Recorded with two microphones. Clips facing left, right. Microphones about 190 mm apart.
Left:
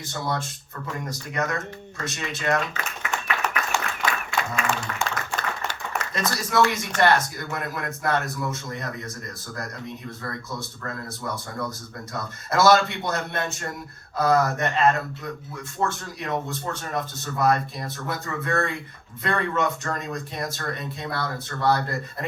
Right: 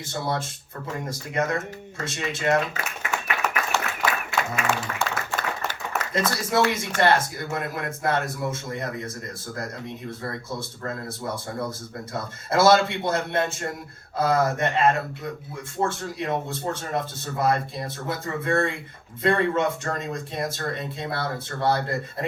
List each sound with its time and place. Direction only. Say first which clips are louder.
0.1 s speech: right 1 dB; 30° right (ahead or behind)
3.1 s clapping: even; centre (ahead or behind)
4.5 s speech: even; 5° right (ahead or behind)
4.9 s applause: right 1 dB; 50° right (ahead or behind)
6.1 s speech: even; 25° right (ahead or behind)
10.2 s speech: right 1 dB; 25° right (ahead or behind)